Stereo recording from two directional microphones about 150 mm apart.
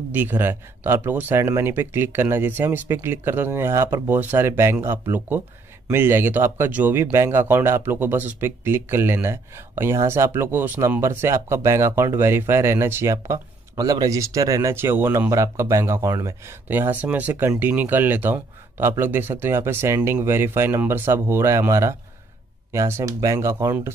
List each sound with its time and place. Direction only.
0.1 s speech: 15° right (ahead or behind)